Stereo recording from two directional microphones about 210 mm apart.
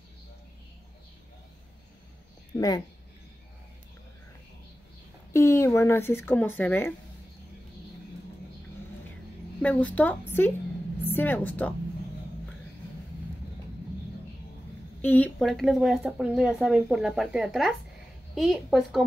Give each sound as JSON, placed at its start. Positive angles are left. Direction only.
{"t": 2.5, "sound": "speech", "side_deg": 15}
{"t": 5.3, "sound": "speech", "side_deg": 15}
{"t": 9.6, "sound": "a woman's voice", "side_deg": 5}
{"t": 15.0, "sound": "speech", "side_deg": 5}